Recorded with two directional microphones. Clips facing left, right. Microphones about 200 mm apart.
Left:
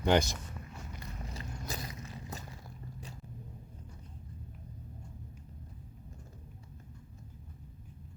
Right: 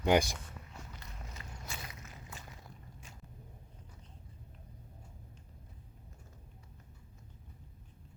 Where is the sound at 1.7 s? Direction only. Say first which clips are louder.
Left 6 dB; 35° left (ahead or behind).